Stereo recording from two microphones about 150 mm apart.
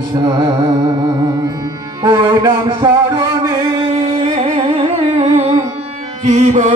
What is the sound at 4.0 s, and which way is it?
Music, 45° right (ahead or behind).